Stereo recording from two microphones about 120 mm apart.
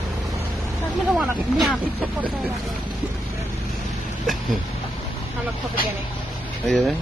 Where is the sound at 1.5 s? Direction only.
Centre (ahead or behind).